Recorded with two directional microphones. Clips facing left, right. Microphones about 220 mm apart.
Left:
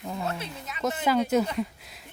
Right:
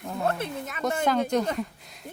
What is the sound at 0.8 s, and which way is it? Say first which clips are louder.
Speech: even; 5° left (ahead or behind).